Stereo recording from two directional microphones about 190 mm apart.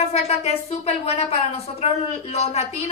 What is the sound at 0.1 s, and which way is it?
A woman's voice, 35° left (ahead or behind).